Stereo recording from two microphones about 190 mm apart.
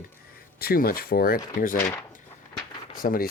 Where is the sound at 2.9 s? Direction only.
50° left (ahead or behind).